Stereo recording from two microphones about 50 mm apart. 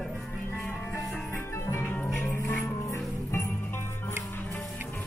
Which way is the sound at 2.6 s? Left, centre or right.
Left.